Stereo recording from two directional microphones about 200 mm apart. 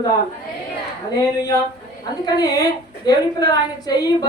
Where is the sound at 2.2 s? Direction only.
20° left (ahead or behind).